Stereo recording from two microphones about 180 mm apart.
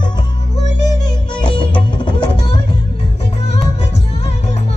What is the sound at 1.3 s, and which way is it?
Music, 25° left (ahead or behind).